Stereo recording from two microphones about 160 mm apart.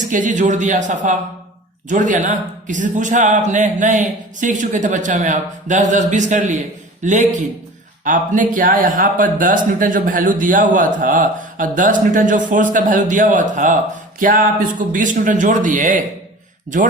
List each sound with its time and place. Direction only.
0.1 s a man's voice: 55° right (ahead or behind)